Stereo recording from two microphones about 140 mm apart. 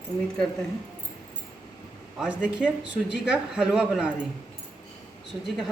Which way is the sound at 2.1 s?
5° right (ahead or behind).